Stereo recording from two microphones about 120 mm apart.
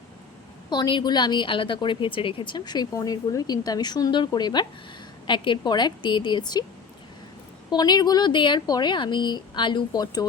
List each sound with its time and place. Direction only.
0.7 s a woman's voice: 40° left (ahead or behind)
7.7 s a woman's voice: 35° left (ahead or behind)